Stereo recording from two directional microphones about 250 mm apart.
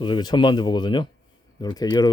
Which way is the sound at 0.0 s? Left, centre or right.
Centre.